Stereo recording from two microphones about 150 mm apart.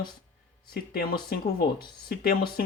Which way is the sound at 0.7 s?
85° left.